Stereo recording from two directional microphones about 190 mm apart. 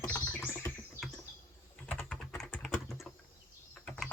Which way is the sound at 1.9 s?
5° left (ahead or behind).